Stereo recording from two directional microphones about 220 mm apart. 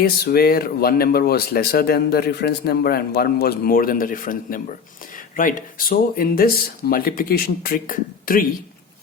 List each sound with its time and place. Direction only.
0.0 s speech: 45° left (ahead or behind)